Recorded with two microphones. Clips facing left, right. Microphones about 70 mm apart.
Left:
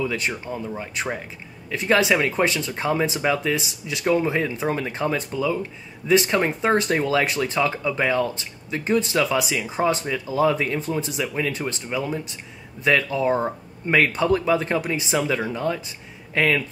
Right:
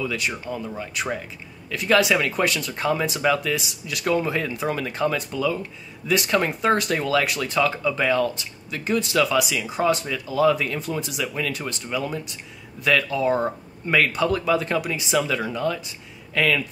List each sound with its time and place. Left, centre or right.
0.0 s speech: left